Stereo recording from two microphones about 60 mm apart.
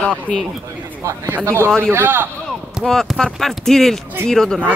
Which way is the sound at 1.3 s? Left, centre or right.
Right.